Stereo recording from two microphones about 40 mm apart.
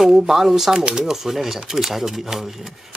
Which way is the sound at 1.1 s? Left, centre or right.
Centre.